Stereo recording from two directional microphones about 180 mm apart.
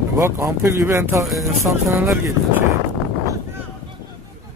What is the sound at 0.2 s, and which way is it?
Speech, 15° right (ahead or behind).